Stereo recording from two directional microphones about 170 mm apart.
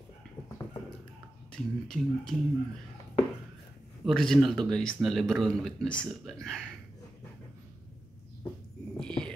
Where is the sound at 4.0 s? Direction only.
Centre (ahead or behind).